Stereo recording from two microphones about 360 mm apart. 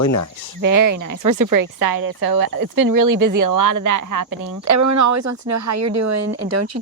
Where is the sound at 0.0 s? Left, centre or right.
Left.